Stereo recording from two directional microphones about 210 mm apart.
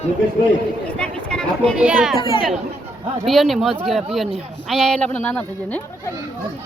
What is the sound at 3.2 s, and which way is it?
Speech, centre (ahead or behind).